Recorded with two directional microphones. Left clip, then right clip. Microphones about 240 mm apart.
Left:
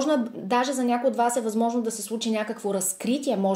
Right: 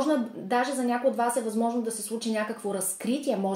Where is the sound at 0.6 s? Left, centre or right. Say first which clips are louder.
Left 2 dB; left.